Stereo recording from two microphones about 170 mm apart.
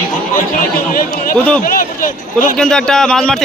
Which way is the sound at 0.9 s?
55° left (ahead or behind).